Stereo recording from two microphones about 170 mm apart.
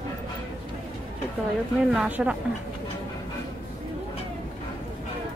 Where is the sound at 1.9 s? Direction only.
5° right (ahead or behind).